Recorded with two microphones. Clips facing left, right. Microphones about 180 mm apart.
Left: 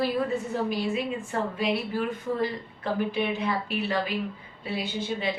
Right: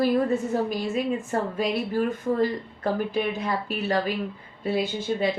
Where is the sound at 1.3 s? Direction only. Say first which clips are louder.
Right 2 dB; 45° right (ahead or behind).